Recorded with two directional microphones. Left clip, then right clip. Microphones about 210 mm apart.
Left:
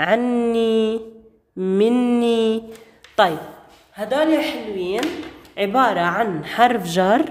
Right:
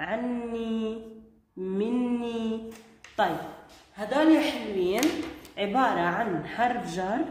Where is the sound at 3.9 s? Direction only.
30° left (ahead or behind).